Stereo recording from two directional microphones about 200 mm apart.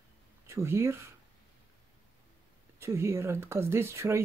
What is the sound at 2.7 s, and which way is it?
Speech, 15° right (ahead or behind).